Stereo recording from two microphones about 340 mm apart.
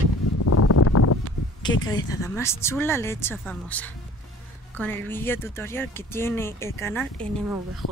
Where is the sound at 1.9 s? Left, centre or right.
Centre.